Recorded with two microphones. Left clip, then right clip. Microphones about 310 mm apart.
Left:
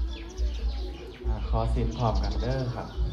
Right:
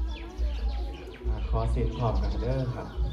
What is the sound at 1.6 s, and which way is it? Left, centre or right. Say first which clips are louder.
Speech: left 1 dB; left.